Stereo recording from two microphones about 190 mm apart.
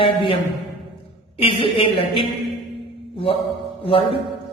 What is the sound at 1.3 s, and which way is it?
Speech, 30° left (ahead or behind).